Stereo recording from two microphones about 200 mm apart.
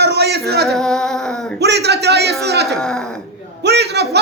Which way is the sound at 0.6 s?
Centre (ahead or behind).